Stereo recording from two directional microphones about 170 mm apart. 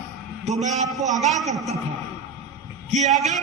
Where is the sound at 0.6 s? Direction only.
45° right (ahead or behind).